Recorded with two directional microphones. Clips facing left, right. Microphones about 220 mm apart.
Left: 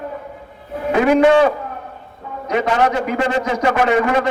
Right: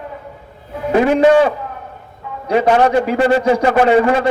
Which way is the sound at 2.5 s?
30° right (ahead or behind).